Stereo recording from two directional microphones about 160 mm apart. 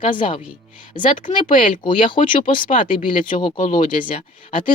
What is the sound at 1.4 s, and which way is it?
Speech, 55° left (ahead or behind).